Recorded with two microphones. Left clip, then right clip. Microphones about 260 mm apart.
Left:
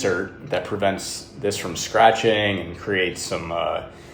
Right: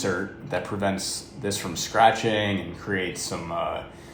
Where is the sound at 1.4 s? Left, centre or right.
Centre.